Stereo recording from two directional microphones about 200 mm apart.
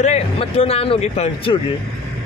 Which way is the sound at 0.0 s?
30° left (ahead or behind).